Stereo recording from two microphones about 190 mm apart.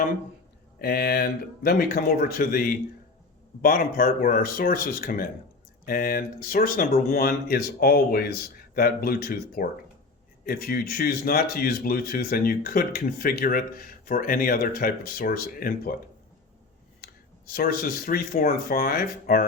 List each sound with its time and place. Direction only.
0.8 s speech: 55° left (ahead or behind)
17.5 s speech: 50° left (ahead or behind)